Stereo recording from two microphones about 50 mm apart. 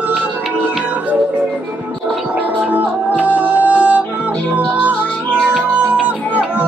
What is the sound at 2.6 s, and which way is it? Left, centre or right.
Music, right.